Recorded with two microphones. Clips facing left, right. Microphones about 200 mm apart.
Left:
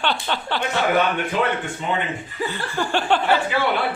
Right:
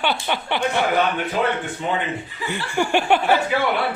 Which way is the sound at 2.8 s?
10° right (ahead or behind).